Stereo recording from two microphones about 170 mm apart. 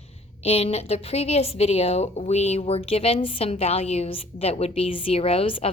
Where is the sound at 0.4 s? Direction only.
35° left (ahead or behind).